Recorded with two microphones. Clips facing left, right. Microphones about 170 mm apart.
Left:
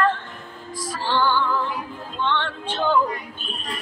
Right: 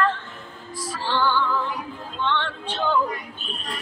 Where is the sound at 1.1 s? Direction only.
45° left (ahead or behind).